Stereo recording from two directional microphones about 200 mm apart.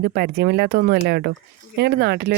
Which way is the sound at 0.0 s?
50° right (ahead or behind).